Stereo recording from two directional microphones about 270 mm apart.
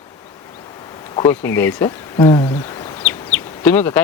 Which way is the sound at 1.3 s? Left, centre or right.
Centre.